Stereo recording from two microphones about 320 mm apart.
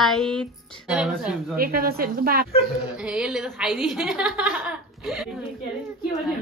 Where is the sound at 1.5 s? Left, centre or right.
Right.